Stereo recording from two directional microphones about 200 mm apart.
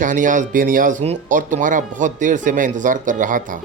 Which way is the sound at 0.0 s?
40° right (ahead or behind).